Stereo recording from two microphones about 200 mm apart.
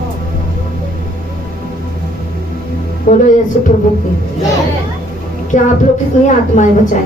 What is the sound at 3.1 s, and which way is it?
Speech, 40° left (ahead or behind).